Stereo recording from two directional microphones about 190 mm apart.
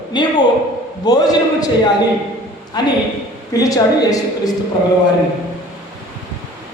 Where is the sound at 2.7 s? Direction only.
20° left (ahead or behind).